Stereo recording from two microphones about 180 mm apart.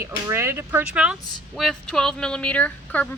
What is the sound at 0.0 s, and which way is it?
Speech, 15° right (ahead or behind).